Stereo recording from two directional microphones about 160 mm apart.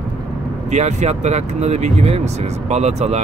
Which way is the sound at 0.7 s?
45° right (ahead or behind).